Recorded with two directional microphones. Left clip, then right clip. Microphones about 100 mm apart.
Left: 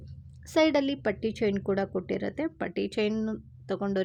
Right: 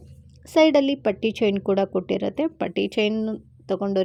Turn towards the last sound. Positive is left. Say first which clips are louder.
# right 7 dB
turn(degrees=-40)  # may be behind; listen again after turning